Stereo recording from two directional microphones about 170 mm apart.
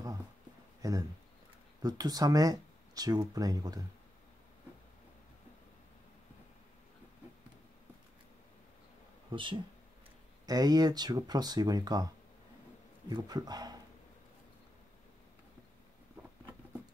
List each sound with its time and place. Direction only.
0.8 s speech: 20° right (ahead or behind)
9.3 s speech: 30° right (ahead or behind)
13.1 s speech: 25° right (ahead or behind)